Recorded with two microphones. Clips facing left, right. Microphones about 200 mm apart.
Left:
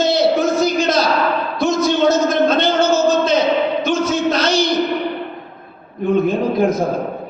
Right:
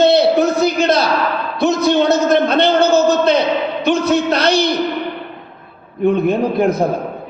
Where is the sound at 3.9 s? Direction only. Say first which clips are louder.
Right 2 dB; 60° right (ahead or behind).